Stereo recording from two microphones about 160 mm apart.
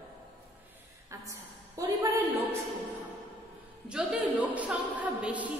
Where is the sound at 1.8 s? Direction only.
20° right (ahead or behind).